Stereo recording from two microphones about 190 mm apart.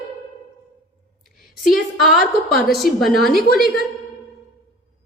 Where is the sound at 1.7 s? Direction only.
Centre (ahead or behind).